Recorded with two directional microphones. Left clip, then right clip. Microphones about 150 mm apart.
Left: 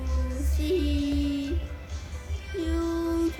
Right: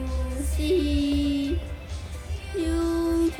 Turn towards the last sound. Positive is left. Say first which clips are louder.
# right 3 dB
turn(degrees=10)  # may be behind; listen again after turning